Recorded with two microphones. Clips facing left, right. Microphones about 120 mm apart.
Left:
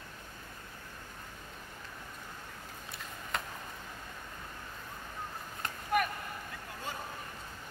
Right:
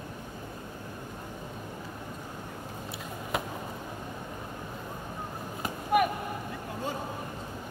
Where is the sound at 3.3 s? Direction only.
5° right (ahead or behind).